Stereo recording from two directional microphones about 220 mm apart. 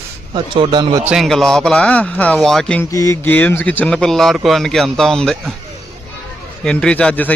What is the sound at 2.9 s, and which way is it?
A man's voice, 15° left (ahead or behind).